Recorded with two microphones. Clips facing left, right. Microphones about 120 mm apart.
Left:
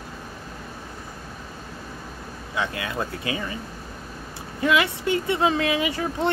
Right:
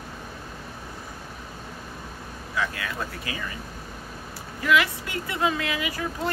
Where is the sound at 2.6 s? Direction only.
25° left (ahead or behind).